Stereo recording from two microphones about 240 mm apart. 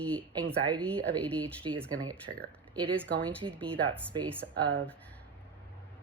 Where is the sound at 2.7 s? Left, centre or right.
Centre.